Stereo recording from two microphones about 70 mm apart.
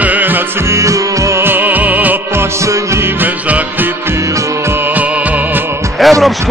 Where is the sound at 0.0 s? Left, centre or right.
Right.